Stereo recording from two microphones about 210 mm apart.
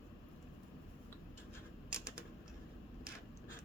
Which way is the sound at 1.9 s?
5° right (ahead or behind).